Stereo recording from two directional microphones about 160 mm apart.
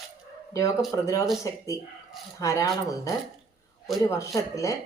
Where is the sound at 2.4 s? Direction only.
20° left (ahead or behind).